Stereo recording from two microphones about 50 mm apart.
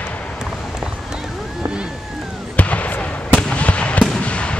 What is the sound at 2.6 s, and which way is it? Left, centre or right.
Fireworks, left.